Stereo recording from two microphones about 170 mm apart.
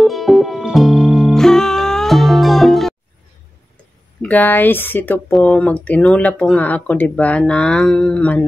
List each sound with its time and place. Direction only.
0.0 s music: centre (ahead or behind)
4.2 s speech: 10° left (ahead or behind)